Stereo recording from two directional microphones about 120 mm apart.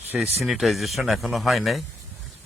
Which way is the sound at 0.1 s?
5° right (ahead or behind).